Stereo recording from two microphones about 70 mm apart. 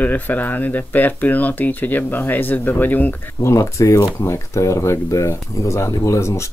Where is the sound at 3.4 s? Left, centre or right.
Left.